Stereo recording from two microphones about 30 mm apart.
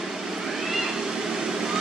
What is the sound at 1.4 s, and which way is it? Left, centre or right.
Vehicle, centre.